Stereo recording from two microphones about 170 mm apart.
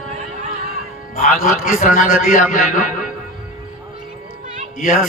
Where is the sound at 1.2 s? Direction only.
55° left (ahead or behind).